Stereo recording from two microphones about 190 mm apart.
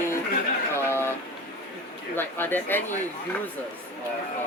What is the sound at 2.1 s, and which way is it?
Speech, 10° left (ahead or behind).